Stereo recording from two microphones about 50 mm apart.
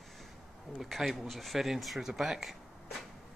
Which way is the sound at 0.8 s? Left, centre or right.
Centre.